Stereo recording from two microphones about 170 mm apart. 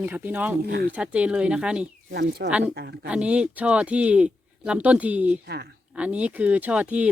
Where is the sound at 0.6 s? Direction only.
70° right (ahead or behind).